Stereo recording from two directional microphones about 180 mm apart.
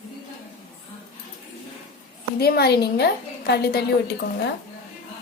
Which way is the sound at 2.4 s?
60° left (ahead or behind).